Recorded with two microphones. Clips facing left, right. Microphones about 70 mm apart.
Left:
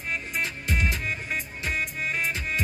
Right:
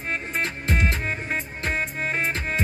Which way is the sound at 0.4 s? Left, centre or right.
Right.